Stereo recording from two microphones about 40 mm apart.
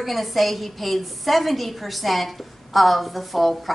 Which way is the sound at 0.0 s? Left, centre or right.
Centre.